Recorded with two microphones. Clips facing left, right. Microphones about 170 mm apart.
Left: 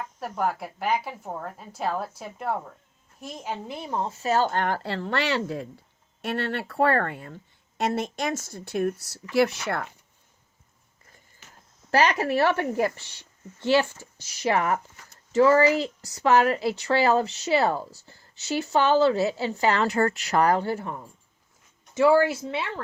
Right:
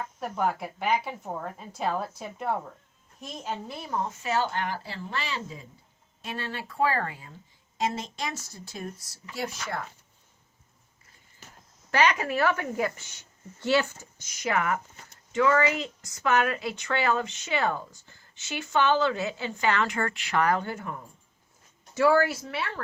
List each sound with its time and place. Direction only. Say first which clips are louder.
0.2 s a woman's voice: left 1 dB; 5° left (ahead or behind); by 3.9 s 20° left (ahead or behind)
3.9 s speech: left 4 dB; 30° left (ahead or behind); by 9.8 s 70° left (ahead or behind)
11.9 s speech: left 3 dB; 35° left (ahead or behind)
21.9 s a woman's voice: left 3 dB; 20° left (ahead or behind)